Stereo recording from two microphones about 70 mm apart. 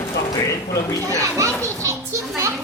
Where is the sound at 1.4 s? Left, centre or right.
Right.